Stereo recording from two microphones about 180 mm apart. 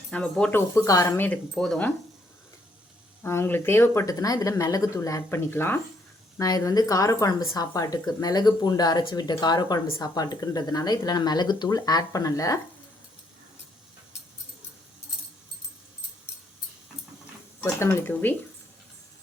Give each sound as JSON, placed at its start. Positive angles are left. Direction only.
{"t": 0.1, "sound": "speech", "side_deg": 5}
{"t": 3.2, "sound": "speech", "side_deg": 10}
{"t": 17.6, "sound": "speech", "side_deg": 15}